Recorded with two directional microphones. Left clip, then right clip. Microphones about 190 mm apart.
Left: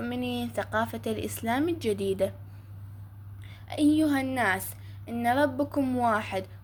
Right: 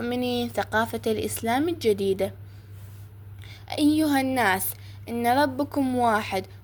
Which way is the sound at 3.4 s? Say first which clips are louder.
Right 2 dB; 25° right (ahead or behind).